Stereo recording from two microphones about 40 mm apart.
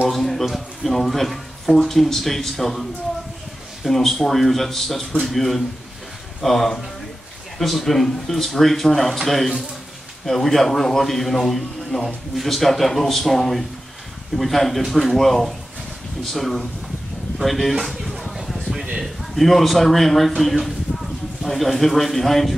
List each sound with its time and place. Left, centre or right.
0.1 s speech: centre
17.8 s a sound: centre
19.3 s speech: centre